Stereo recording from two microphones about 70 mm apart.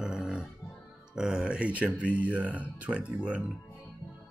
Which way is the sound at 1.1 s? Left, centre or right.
Centre.